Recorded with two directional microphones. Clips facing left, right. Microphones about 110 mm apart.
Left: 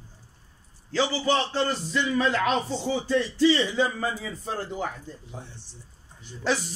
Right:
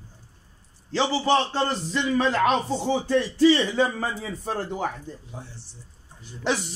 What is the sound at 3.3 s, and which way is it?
Speech, 55° right (ahead or behind).